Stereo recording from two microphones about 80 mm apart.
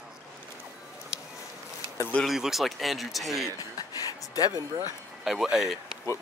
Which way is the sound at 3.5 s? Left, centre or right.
Left.